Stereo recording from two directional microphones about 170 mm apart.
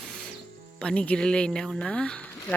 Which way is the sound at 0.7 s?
5° left (ahead or behind).